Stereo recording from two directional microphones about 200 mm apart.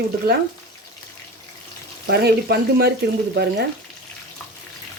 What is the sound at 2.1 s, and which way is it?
Speech, 55° right (ahead or behind).